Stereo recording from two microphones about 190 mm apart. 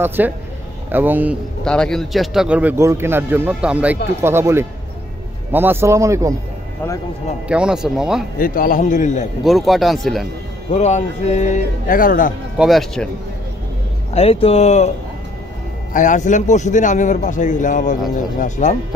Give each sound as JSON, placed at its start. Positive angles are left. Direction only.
{"t": 0.0, "sound": "speech", "side_deg": -10}
{"t": 1.6, "sound": "speech", "side_deg": 5}
{"t": 7.4, "sound": "speech", "side_deg": -5}
{"t": 8.4, "sound": "a man's voice", "side_deg": 50}
{"t": 9.4, "sound": "speech", "side_deg": 0}
{"t": 10.7, "sound": "a man's voice", "side_deg": 35}
{"t": 12.5, "sound": "speech", "side_deg": 0}
{"t": 14.1, "sound": "a man's voice", "side_deg": 30}
{"t": 15.9, "sound": "a man's voice", "side_deg": 40}